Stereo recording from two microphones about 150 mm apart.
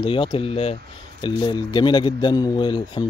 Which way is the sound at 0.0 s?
35° left (ahead or behind).